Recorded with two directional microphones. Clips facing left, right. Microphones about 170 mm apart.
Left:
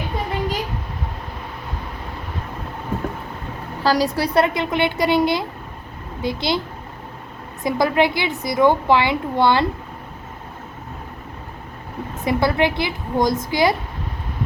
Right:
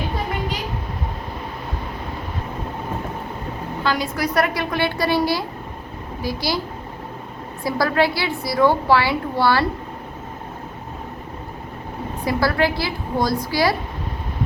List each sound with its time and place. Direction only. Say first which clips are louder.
3.8 s a woman's voice: left 5 dB; 40° left (ahead or behind)
4.2 s a woman's voice: left 2 dB; 25° left (ahead or behind)
7.6 s a woman's voice: left 2 dB; 20° left (ahead or behind)
12.2 s a woman's voice: left 1 dB; 20° left (ahead or behind)